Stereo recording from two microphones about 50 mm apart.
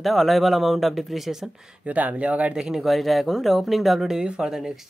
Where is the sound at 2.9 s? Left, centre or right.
Centre.